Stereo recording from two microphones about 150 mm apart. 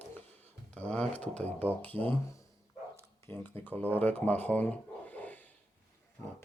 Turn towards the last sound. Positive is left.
turn(degrees=10)  # may be behind; listen again after turning